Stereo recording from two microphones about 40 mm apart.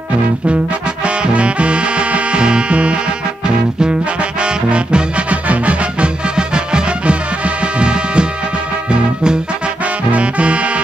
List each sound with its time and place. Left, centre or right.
1.0 s music: right
6.3 s music: right
10.1 s music: right